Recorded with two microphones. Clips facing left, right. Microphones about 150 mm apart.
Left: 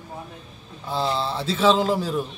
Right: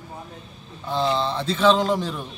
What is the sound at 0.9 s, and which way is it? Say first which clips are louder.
A man's voice: right 2 dB; 5° left (ahead or behind).